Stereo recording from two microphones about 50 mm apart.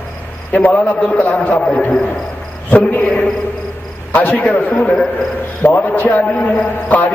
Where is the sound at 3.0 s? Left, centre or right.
Centre.